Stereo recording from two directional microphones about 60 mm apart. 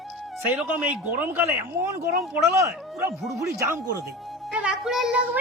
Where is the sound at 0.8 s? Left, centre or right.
Right.